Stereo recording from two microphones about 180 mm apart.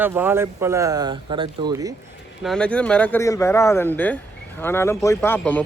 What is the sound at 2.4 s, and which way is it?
Speech, 5° left (ahead or behind).